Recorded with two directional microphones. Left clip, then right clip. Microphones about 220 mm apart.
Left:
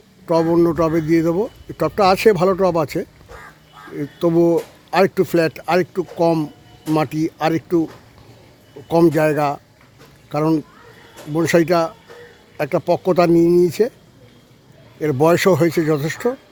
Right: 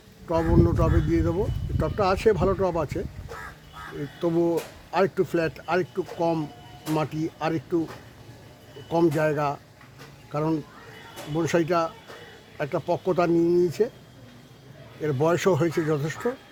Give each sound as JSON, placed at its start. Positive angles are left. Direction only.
{"t": 0.3, "sound": "speech", "side_deg": 45}
{"t": 4.2, "sound": "speech", "side_deg": 45}
{"t": 8.9, "sound": "speech", "side_deg": 45}
{"t": 15.0, "sound": "speech", "side_deg": 45}